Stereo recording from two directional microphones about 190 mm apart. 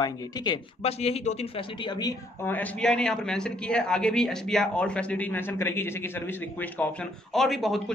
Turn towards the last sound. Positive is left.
turn(degrees=0)  # may be behind; listen again after turning